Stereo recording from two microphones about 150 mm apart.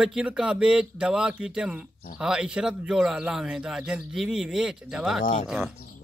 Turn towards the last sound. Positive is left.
turn(degrees=-5)  # may be behind; listen again after turning